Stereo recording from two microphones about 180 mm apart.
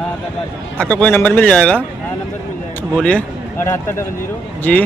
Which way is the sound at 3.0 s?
5° left (ahead or behind).